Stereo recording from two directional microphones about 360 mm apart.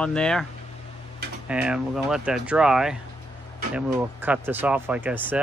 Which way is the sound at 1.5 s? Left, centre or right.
Centre.